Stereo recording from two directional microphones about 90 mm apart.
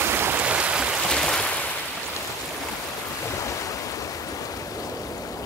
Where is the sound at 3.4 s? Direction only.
35° left (ahead or behind).